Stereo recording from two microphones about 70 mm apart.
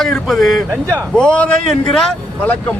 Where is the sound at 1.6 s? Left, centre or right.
Centre.